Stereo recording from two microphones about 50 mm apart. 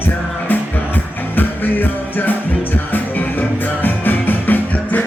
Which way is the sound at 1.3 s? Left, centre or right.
Left.